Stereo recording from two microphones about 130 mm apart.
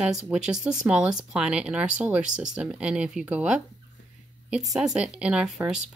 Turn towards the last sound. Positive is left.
turn(degrees=-5)  # may be behind; listen again after turning